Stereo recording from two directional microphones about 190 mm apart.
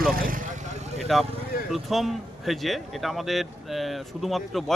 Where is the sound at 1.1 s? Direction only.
Centre (ahead or behind).